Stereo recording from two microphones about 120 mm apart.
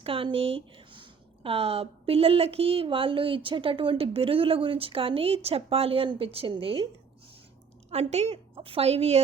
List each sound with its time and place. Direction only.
0.0 s speech: 50° right (ahead or behind)
7.9 s a woman's voice: 60° right (ahead or behind)